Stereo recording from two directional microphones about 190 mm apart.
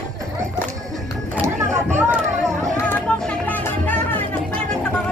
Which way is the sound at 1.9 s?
15° right (ahead or behind).